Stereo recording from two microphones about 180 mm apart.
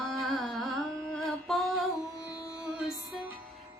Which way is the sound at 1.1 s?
Centre (ahead or behind).